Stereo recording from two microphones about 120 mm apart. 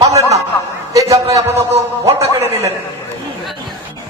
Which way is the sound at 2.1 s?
25° right (ahead or behind).